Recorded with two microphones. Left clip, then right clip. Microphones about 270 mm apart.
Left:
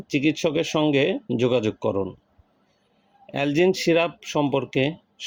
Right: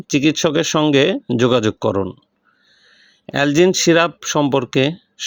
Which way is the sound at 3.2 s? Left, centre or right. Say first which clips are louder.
Right 6 dB; right.